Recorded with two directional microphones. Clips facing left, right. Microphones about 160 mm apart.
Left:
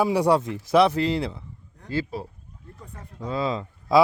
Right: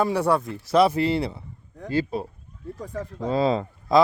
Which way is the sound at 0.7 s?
Centre (ahead or behind).